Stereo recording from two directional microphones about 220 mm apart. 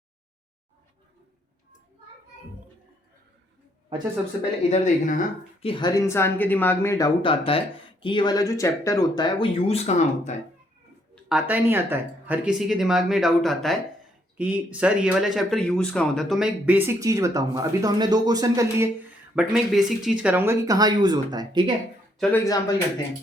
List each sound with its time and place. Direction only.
4.7 s speech: 35° left (ahead or behind)
5.6 s speech: 20° left (ahead or behind)
11.1 s speech: 5° right (ahead or behind)
19.4 s speech: centre (ahead or behind); by 21.7 s 20° right (ahead or behind)
22.2 s speech: 10° left (ahead or behind)